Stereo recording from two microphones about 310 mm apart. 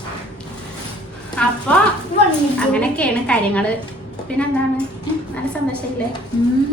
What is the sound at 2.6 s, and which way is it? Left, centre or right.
A child's voice, centre.